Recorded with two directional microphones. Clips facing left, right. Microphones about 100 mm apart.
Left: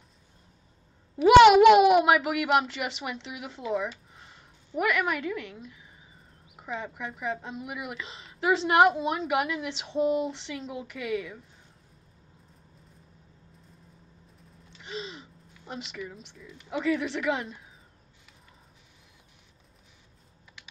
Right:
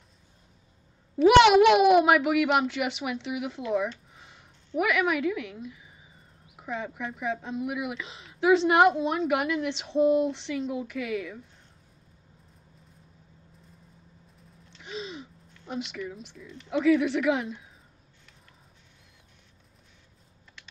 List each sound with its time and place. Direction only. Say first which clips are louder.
1.1 s speech: left 2 dB; centre (ahead or behind)
14.7 s speech: right 1 dB; centre (ahead or behind)
20.6 s typing: even; 5° left (ahead or behind)